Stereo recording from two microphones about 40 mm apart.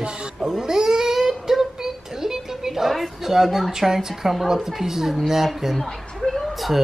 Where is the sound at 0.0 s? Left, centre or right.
Right; by 3.7 s centre.